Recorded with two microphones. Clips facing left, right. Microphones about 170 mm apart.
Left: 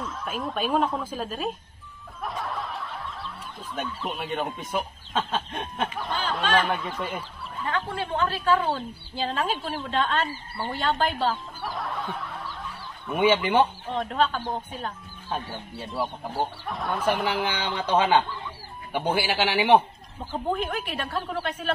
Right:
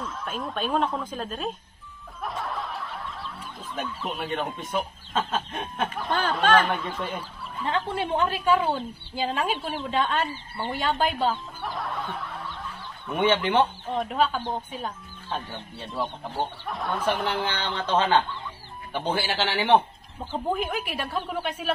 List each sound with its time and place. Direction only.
0.0 s speech: centre (ahead or behind)
2.2 s snicker: centre (ahead or behind)
3.7 s speech: centre (ahead or behind)
7.6 s a woman's voice: 25° right (ahead or behind); by 14.0 s 5° left (ahead or behind)
14.0 s a woman's voice: 10° right (ahead or behind)
15.2 s speech: 5° left (ahead or behind)
17.9 s a man's voice: 10° left (ahead or behind)
20.4 s a woman's voice: 5° right (ahead or behind)